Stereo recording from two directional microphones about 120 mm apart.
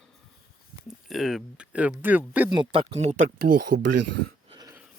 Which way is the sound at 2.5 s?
45° right (ahead or behind).